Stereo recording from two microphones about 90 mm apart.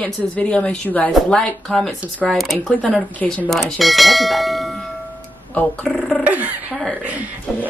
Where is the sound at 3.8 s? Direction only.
Centre (ahead or behind).